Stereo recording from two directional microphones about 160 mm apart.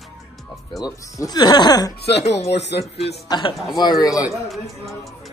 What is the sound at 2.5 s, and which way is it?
Speech, 90° left.